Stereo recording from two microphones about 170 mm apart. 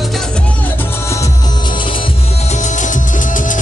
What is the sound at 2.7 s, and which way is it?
Music, 50° left (ahead or behind).